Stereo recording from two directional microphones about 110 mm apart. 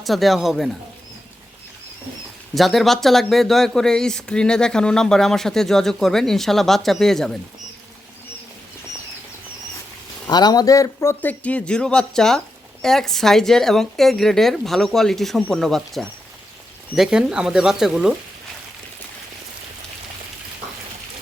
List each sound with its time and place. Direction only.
0.0 s speech: centre (ahead or behind)
2.6 s speech: centre (ahead or behind)
10.2 s a man's voice: 40° left (ahead or behind); by 18.1 s 5° right (ahead or behind)